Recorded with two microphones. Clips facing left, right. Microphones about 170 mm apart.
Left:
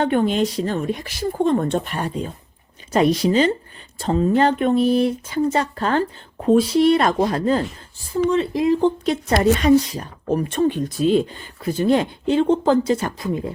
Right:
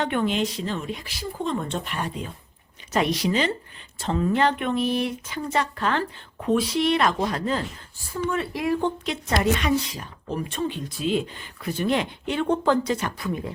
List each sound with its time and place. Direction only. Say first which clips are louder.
0.0 s a woman's voice: left 6 dB; 40° left (ahead or behind)
8.3 s speech: left 7 dB; 25° left (ahead or behind)
9.0 s a woman's voice: left 5 dB; 35° left (ahead or behind)